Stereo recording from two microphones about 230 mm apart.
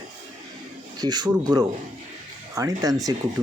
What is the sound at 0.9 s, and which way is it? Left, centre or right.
Speech, centre.